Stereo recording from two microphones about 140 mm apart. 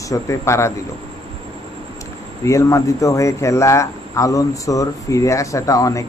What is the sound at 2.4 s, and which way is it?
Speech, 20° left (ahead or behind).